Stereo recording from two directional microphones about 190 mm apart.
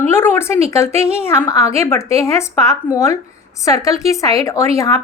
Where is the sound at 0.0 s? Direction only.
10° left (ahead or behind).